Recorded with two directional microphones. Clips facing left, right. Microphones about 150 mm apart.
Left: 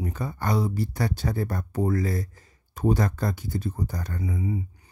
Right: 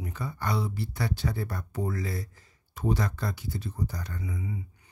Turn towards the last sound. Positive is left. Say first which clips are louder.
# left 7 dB
turn(degrees=35)  # may be behind; listen again after turning